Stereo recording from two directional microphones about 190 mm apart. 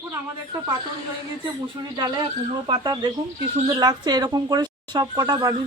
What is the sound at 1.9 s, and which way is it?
Speech, 25° right (ahead or behind).